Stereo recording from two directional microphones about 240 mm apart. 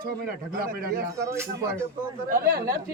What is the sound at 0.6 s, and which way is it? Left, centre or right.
Speech, right.